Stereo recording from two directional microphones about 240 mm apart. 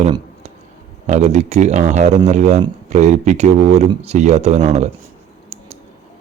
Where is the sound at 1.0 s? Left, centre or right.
Right.